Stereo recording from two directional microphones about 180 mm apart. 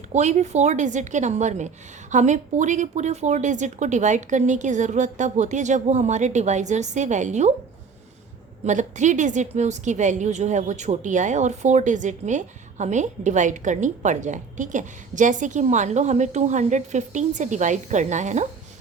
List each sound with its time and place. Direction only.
0.1 s a woman's voice: 40° right (ahead or behind)
8.6 s a woman's voice: 40° right (ahead or behind)